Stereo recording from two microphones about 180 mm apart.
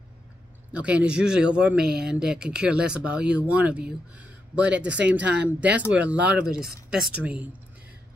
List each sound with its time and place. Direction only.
0.7 s speech: 5° right (ahead or behind)
5.2 s speech: 70° right (ahead or behind)
5.9 s speech: 5° right (ahead or behind)